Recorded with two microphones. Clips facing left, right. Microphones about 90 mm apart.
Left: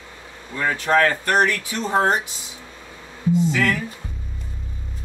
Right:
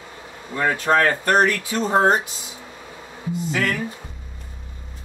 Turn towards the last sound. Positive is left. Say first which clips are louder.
# left 2 dB
turn(degrees=-25)  # may be behind; listen again after turning